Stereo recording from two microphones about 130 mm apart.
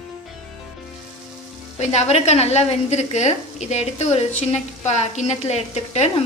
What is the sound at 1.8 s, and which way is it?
A woman's voice, 60° left (ahead or behind).